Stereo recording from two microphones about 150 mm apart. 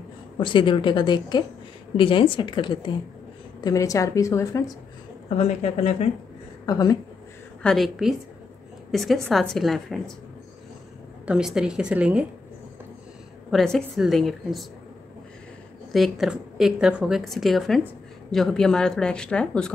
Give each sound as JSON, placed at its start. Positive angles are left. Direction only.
{"t": 0.4, "sound": "a woman's voice", "side_deg": 35}
{"t": 3.6, "sound": "a woman's voice", "side_deg": 20}
{"t": 5.4, "sound": "speech", "side_deg": 45}
{"t": 6.6, "sound": "a woman's voice", "side_deg": 25}
{"t": 7.6, "sound": "a woman's voice", "side_deg": 0}
{"t": 11.2, "sound": "a woman's voice", "side_deg": -5}
{"t": 13.5, "sound": "a woman's voice", "side_deg": 5}
{"t": 15.9, "sound": "a woman's voice", "side_deg": 0}